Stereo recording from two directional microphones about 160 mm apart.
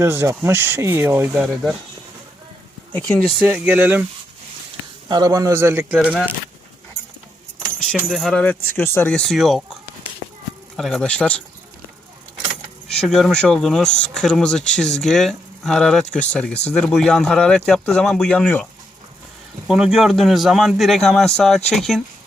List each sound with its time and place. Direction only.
0.0 s speech: 15° right (ahead or behind)
2.9 s speech: 5° left (ahead or behind)
3.4 s speech: 10° right (ahead or behind)
5.0 s speech: 25° right (ahead or behind); by 6.3 s 10° right (ahead or behind)
8.1 s speech: 5° left (ahead or behind)
10.8 s speech: 5° left (ahead or behind)
12.9 s speech: 5° left (ahead or behind)
19.6 s speech: 5° right (ahead or behind)